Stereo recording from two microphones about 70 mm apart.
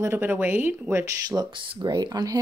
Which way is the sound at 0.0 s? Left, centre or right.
Right.